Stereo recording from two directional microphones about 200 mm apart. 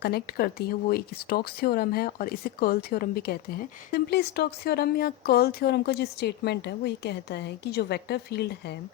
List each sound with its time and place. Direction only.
0.0 s speech: 50° left (ahead or behind)